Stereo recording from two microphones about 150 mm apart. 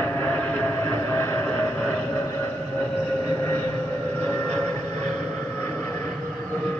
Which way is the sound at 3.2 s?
15° left (ahead or behind).